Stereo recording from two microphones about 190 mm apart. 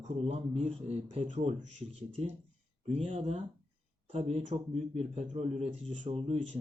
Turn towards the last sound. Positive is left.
turn(degrees=-35)  # may be behind; listen again after turning